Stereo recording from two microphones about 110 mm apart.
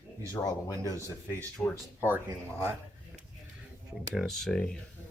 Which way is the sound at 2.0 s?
20° right (ahead or behind).